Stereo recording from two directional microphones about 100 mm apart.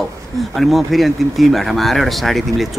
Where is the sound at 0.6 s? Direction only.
Centre (ahead or behind).